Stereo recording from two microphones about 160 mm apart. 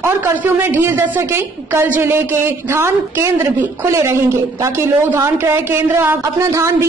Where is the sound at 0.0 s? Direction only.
15° right (ahead or behind).